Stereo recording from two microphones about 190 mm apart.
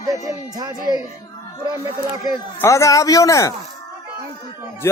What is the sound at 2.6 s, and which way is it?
Speech, 15° left (ahead or behind).